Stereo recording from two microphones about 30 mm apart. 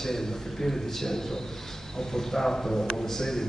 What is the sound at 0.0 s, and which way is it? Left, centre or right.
A man's voice, centre.